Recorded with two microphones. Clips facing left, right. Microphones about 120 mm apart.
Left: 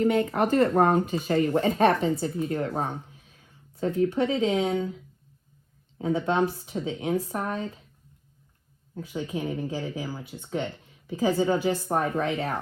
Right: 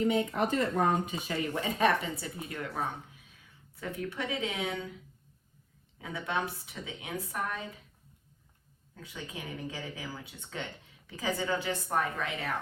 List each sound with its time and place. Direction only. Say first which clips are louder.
0.0 s speech: left 5 dB; 60° left (ahead or behind); by 4.9 s 35° left (ahead or behind)
6.0 s speech: left 10 dB; 35° left (ahead or behind)
9.0 s speech: left 11 dB; 25° left (ahead or behind)